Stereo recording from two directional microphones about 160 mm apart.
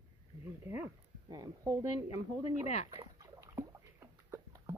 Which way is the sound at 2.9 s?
20° right (ahead or behind).